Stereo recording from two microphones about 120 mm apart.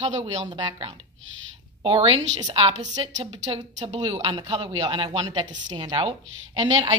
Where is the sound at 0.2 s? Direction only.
40° right (ahead or behind).